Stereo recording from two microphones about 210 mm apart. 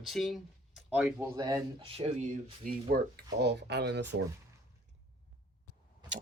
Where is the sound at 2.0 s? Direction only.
30° right (ahead or behind).